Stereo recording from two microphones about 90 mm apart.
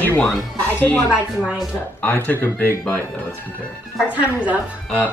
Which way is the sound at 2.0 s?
20° left (ahead or behind).